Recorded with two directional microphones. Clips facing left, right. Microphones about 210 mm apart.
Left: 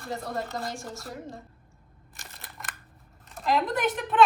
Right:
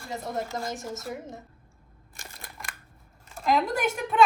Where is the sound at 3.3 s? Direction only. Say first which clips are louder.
Right 1 dB; centre (ahead or behind).